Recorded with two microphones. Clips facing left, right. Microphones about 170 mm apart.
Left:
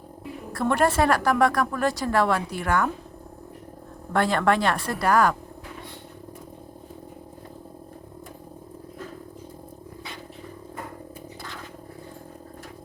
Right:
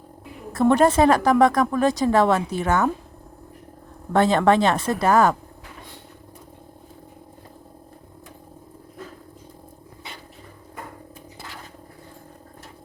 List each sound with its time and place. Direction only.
0.5 s a woman's voice: 20° right (ahead or behind)
4.1 s a woman's voice: 20° right (ahead or behind)